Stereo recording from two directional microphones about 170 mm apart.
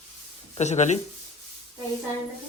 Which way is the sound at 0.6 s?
40° left (ahead or behind).